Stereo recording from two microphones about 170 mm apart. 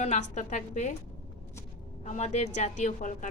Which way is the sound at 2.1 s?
45° left (ahead or behind).